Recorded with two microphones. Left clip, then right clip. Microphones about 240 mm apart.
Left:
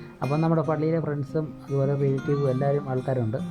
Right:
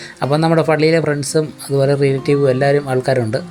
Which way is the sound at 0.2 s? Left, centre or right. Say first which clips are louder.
Right 11 dB; left.